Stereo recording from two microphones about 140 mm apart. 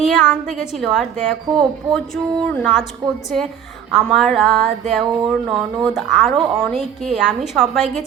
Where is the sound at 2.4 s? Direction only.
10° left (ahead or behind).